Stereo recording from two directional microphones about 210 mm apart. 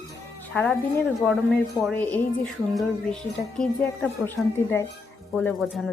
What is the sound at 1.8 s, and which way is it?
A woman's voice, 5° left (ahead or behind).